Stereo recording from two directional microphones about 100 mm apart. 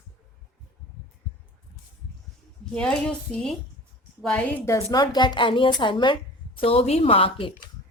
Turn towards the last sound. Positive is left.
turn(degrees=65)  # may be behind; listen again after turning